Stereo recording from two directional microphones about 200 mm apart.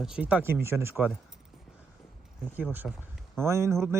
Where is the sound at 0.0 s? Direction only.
5° right (ahead or behind).